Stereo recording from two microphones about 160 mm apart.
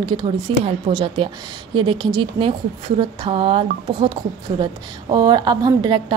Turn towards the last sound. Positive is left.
turn(degrees=-25)  # may be behind; listen again after turning